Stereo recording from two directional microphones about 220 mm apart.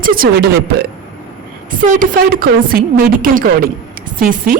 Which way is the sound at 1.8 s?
40° right (ahead or behind).